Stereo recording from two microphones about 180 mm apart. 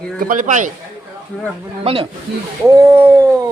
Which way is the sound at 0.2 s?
45° right (ahead or behind).